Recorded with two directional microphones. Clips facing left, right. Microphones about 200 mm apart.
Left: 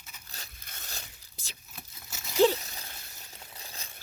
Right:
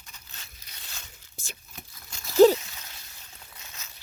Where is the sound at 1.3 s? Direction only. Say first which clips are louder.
Right 8 dB; 50° right (ahead or behind).